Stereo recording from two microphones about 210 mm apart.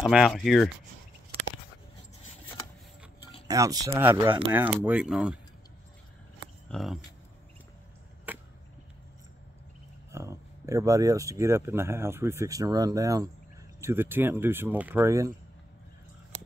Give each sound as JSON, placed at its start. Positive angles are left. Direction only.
{"t": 0.1, "sound": "speech", "side_deg": 0}
{"t": 3.4, "sound": "speech", "side_deg": -15}
{"t": 6.7, "sound": "speech", "side_deg": 0}
{"t": 8.3, "sound": "chop", "side_deg": -10}
{"t": 10.1, "sound": "speech", "side_deg": -15}